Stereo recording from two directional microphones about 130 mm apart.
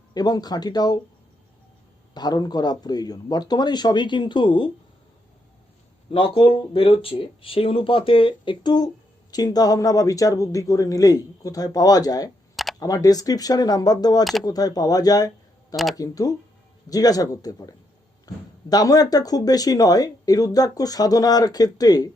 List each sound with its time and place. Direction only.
0.1 s a man's voice: 30° left (ahead or behind)
2.1 s a man's voice: 30° left (ahead or behind)
6.1 s speech: 45° left (ahead or behind)
15.7 s speech: centre (ahead or behind)
16.0 s speech: 30° left (ahead or behind)